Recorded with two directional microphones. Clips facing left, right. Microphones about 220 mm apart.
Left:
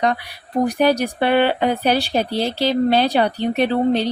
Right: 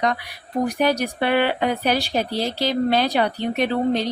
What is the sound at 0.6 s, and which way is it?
A woman's voice, 30° left (ahead or behind).